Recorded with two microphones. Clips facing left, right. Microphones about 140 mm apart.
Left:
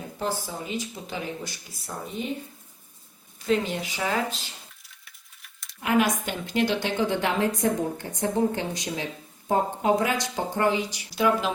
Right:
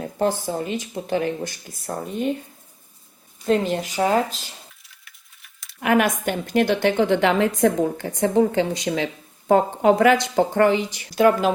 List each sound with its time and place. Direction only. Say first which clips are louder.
0.2 s speech: right 8 dB; 50° right (ahead or behind)
3.4 s speech: right 5 dB; 45° right (ahead or behind)
4.8 s a sound: right 1 dB; centre (ahead or behind)
5.8 s a woman's voice: right 4 dB; 60° right (ahead or behind); by 9.0 s 90° right
9.5 s speech: right 6 dB; 75° right (ahead or behind); by 11.5 s 50° right (ahead or behind)